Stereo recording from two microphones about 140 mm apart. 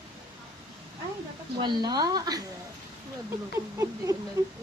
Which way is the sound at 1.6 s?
30° right (ahead or behind).